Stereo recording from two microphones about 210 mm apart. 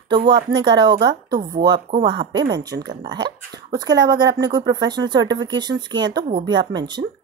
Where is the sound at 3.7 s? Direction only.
20° right (ahead or behind).